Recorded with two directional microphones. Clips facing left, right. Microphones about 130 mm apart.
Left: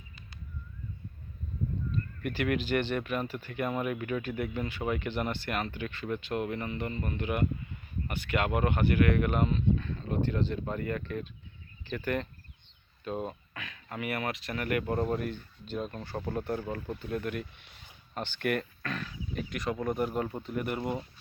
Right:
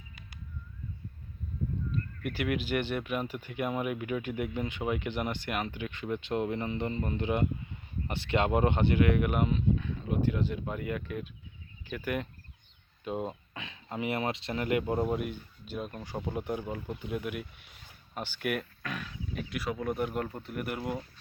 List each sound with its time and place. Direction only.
2.2 s speech: 10° right (ahead or behind)